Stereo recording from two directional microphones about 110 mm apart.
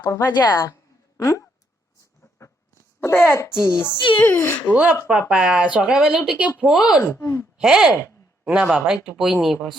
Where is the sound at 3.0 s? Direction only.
20° left (ahead or behind).